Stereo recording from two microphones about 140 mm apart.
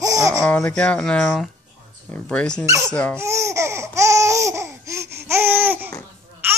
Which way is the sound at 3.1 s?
20° right (ahead or behind).